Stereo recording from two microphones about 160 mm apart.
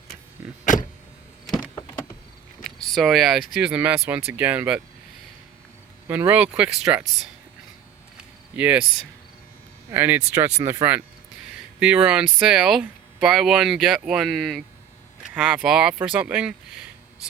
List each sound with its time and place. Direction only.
0.6 s power windows: 55° left (ahead or behind)
2.6 s a sound: 5° left (ahead or behind)
3.5 s speech: 10° right (ahead or behind)
6.1 s speech: 10° right (ahead or behind)
8.5 s speech: 10° right (ahead or behind)
9.9 s speech: 10° right (ahead or behind)